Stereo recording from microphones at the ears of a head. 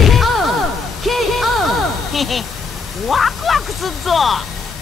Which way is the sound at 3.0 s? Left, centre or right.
Left.